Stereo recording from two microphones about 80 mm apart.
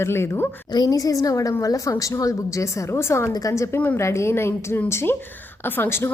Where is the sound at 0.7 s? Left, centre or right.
Left.